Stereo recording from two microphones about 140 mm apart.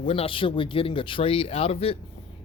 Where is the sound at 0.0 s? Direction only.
40° left (ahead or behind).